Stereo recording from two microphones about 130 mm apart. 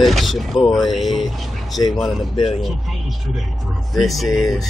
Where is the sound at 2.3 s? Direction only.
45° left (ahead or behind).